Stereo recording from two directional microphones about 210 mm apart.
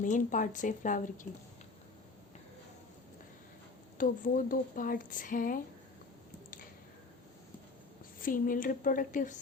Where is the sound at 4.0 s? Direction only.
40° left (ahead or behind).